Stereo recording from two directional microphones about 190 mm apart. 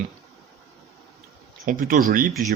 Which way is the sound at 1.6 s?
45° right (ahead or behind).